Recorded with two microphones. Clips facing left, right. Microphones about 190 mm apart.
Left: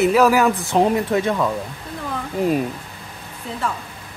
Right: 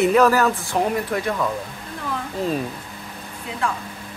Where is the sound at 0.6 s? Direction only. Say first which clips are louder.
Left 4 dB; 20° left (ahead or behind).